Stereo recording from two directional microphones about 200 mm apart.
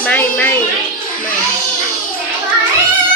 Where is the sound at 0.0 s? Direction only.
10° left (ahead or behind).